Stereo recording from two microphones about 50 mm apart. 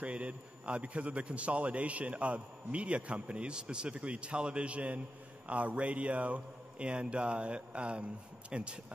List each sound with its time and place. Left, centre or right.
0.0 s a man's voice: right